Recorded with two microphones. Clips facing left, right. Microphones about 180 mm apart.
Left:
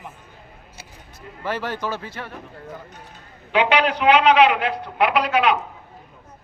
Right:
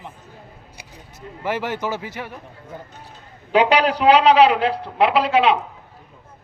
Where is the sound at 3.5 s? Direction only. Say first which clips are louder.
Right 3 dB; 35° right (ahead or behind).